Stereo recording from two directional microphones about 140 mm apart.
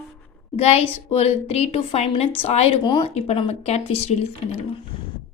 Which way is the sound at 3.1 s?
45° left (ahead or behind).